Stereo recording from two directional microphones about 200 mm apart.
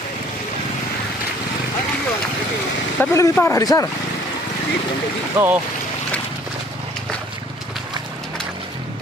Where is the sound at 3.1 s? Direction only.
15° left (ahead or behind).